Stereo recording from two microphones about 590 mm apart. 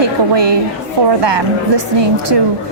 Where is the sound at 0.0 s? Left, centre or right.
Right.